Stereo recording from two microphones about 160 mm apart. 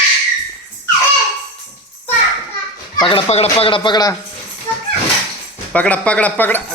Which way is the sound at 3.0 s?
35° left (ahead or behind).